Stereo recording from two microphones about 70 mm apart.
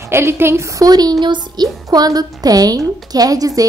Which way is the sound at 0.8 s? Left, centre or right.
Right.